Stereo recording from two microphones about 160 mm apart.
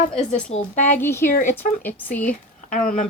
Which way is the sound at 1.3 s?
55° left (ahead or behind).